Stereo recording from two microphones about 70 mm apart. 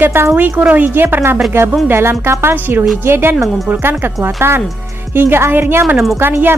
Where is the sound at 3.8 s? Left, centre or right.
Right.